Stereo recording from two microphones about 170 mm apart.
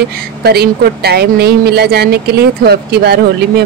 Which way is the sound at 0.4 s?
65° right (ahead or behind).